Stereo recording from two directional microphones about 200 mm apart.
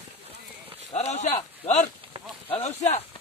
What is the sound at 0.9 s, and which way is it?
Speech, 35° left (ahead or behind).